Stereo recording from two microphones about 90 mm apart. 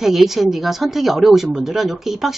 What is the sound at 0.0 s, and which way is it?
Speech, centre (ahead or behind).